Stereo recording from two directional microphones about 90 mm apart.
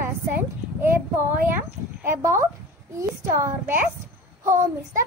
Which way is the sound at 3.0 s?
30° right (ahead or behind).